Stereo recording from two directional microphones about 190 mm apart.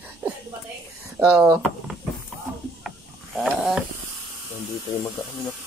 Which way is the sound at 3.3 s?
Centre (ahead or behind).